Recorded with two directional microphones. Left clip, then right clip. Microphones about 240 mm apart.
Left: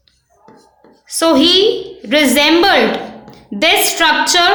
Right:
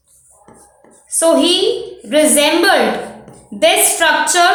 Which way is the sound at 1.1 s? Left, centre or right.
Left.